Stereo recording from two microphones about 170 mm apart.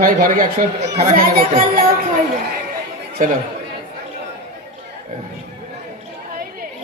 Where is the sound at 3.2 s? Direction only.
50° right (ahead or behind).